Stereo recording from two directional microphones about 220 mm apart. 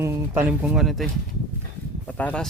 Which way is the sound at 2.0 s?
5° left (ahead or behind).